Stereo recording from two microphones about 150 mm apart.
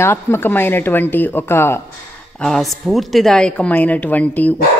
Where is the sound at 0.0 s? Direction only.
15° left (ahead or behind).